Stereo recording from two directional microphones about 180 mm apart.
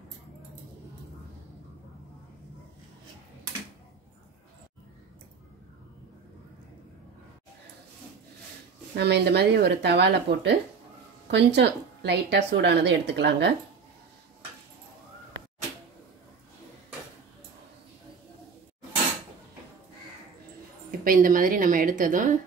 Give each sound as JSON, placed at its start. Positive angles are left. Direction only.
{"t": 8.9, "sound": "a woman's voice", "side_deg": -65}
{"t": 21.0, "sound": "a woman's voice", "side_deg": -50}